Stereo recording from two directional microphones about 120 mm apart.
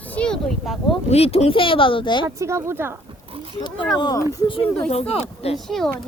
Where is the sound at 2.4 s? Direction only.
20° right (ahead or behind).